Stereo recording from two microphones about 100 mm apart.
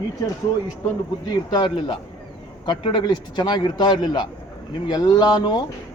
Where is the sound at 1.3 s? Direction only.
50° left (ahead or behind).